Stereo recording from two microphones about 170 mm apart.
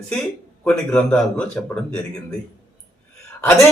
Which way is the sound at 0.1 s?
5° left (ahead or behind).